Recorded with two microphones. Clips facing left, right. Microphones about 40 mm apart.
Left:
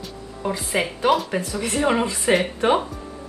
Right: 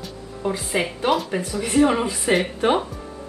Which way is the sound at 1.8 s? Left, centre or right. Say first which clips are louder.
Right 3 dB; centre.